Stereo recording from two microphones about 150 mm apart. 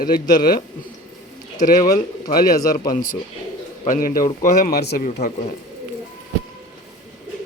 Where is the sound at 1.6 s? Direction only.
60° left (ahead or behind).